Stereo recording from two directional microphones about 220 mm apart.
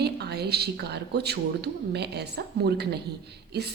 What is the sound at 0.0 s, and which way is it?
A woman's voice, 45° right (ahead or behind).